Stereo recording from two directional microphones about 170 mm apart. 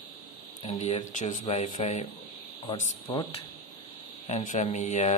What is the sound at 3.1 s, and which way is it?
Speech, 30° left (ahead or behind).